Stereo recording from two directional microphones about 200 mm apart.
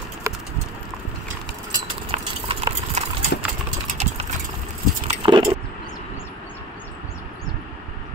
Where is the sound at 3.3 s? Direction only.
55° left (ahead or behind).